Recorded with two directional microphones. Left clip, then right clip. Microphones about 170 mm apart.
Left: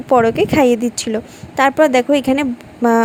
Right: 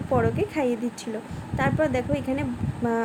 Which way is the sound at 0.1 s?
55° left (ahead or behind).